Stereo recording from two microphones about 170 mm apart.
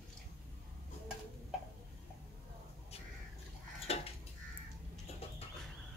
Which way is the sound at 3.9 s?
35° left (ahead or behind).